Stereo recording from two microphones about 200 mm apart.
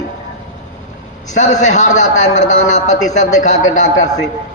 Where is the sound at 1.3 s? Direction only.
40° left (ahead or behind).